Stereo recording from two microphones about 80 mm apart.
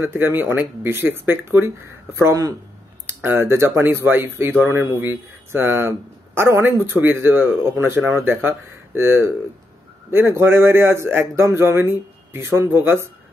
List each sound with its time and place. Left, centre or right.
0.0 s speech: right
3.1 s a man's voice: right